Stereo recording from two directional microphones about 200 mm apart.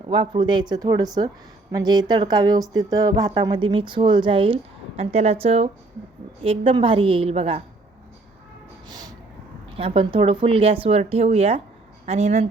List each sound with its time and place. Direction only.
0.1 s speech: 25° right (ahead or behind)
8.9 s a sound: 20° right (ahead or behind)
9.7 s speech: 30° right (ahead or behind)